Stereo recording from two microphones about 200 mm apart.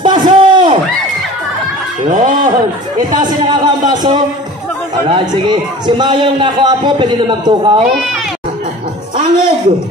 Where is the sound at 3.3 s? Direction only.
20° right (ahead or behind).